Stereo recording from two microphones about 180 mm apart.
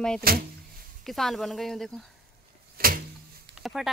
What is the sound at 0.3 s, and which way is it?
Speech, 55° right (ahead or behind).